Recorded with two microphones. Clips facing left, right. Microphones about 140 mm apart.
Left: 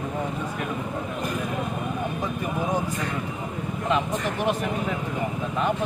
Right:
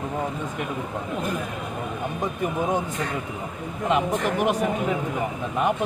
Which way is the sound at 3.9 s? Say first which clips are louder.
Right 3 dB; 15° right (ahead or behind).